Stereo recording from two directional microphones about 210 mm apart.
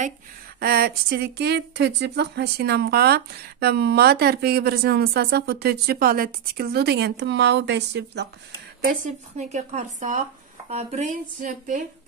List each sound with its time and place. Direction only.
0.6 s speech: 45° right (ahead or behind)
8.8 s a woman's voice: 35° right (ahead or behind)